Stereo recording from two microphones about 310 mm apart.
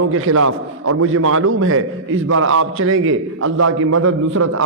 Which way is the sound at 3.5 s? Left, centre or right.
Right.